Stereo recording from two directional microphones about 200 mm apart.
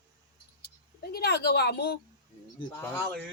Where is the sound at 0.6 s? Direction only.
50° left (ahead or behind).